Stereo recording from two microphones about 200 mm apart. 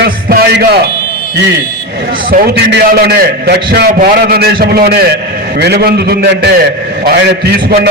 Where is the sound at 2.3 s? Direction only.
50° right (ahead or behind).